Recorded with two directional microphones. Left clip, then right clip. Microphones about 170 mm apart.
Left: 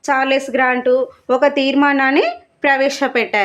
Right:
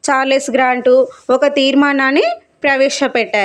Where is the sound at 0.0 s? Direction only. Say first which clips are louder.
Right 2 dB; 35° right (ahead or behind).